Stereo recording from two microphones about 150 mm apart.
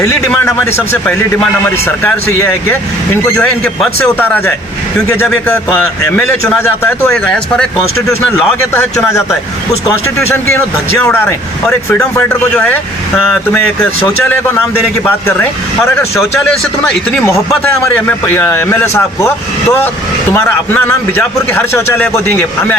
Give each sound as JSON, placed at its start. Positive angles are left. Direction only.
{"t": 0.4, "sound": "a man's voice", "side_deg": 15}
{"t": 6.1, "sound": "a man's voice", "side_deg": 5}
{"t": 8.7, "sound": "a man's voice", "side_deg": 15}
{"t": 17.1, "sound": "a man's voice", "side_deg": 15}
{"t": 20.3, "sound": "a man's voice", "side_deg": 15}